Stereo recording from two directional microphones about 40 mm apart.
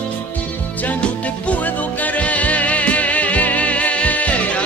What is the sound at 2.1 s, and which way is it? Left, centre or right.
Music, left.